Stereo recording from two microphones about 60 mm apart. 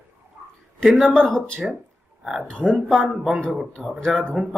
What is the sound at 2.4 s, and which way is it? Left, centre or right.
Speech, centre.